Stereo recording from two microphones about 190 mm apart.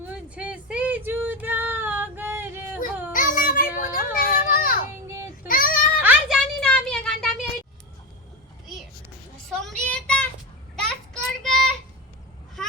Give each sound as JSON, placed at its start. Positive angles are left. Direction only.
{"t": 0.0, "sound": "female singing", "side_deg": -5}
{"t": 3.1, "sound": "a sound", "side_deg": 45}
{"t": 5.0, "sound": "child singing", "side_deg": -15}
{"t": 5.5, "sound": "child singing", "side_deg": 45}
{"t": 6.0, "sound": "a sound", "side_deg": -5}
{"t": 9.5, "sound": "child singing", "side_deg": 5}